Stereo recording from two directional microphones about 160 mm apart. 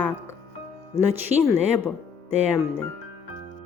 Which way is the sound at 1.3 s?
10° right (ahead or behind).